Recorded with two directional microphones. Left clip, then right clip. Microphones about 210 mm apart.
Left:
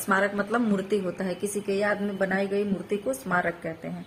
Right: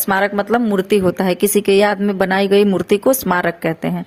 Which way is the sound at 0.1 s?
40° right (ahead or behind).